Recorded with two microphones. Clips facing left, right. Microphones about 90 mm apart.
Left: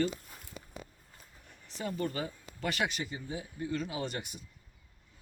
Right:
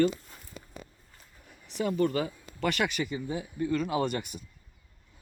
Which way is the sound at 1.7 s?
85° right.